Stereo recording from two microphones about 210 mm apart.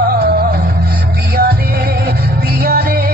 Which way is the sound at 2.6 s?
45° right (ahead or behind).